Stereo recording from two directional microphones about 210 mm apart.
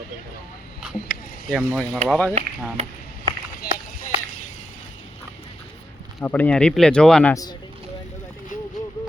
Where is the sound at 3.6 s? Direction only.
45° left (ahead or behind).